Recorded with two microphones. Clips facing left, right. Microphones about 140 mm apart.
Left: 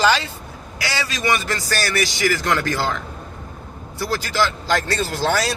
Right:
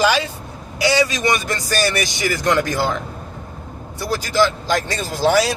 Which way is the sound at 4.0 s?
15° right (ahead or behind).